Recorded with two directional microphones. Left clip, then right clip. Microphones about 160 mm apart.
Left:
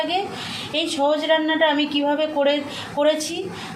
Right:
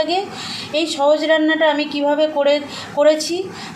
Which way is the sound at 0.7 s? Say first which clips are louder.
Right 5 dB; 40° right (ahead or behind).